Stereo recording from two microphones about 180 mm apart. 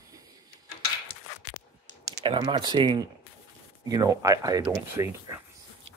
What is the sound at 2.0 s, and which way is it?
Speech, 20° right (ahead or behind).